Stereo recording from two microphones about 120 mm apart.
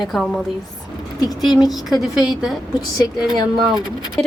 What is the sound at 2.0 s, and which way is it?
Speech, 5° right (ahead or behind).